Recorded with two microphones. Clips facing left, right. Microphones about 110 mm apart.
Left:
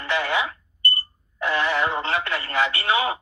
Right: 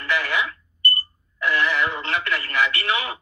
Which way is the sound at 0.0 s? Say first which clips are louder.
Left 1 dB; 25° left (ahead or behind).